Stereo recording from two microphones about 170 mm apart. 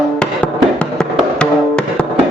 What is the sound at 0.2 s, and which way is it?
Music, 5° left (ahead or behind).